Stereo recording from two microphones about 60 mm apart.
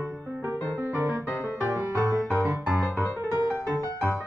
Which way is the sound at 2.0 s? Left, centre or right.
Right.